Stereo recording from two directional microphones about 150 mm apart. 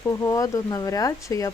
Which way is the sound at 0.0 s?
20° left (ahead or behind).